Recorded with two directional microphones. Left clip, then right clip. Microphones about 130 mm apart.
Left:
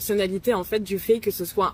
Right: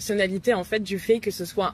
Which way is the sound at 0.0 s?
20° left (ahead or behind).